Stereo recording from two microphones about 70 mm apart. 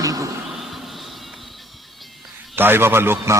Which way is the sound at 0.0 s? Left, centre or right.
Right.